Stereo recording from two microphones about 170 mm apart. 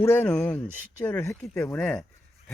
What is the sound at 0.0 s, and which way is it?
Speech, 10° left (ahead or behind).